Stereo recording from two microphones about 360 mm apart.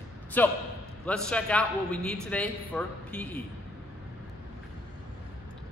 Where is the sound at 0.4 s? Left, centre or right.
Centre.